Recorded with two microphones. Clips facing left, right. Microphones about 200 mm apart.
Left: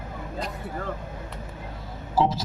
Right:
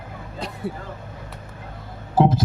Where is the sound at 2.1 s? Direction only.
55° right (ahead or behind).